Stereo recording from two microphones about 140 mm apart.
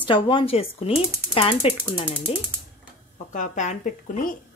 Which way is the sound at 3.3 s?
60° left (ahead or behind).